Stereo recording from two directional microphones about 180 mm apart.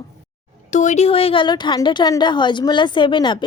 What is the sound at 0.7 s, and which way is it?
Speech, 40° left (ahead or behind).